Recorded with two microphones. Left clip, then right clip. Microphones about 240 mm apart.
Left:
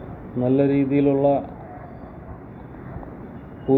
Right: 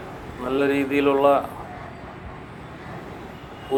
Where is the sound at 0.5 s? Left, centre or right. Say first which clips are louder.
Even; right.